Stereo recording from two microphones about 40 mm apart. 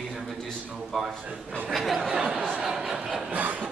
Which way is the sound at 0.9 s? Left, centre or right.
Centre.